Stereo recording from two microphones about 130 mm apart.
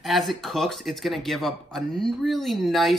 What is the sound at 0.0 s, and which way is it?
Speech, centre (ahead or behind).